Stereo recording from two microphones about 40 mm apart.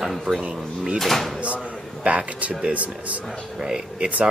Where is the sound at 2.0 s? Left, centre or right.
Right.